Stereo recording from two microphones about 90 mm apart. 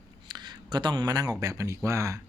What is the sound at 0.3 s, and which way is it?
Speech, 55° right (ahead or behind).